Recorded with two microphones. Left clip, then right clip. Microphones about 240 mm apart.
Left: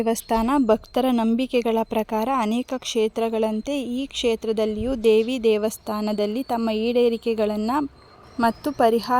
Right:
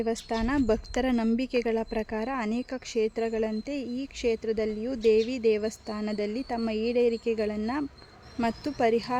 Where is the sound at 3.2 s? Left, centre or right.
Left.